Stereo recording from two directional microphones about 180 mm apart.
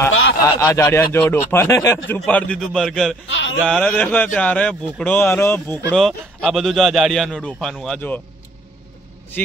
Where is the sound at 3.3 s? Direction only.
90° left.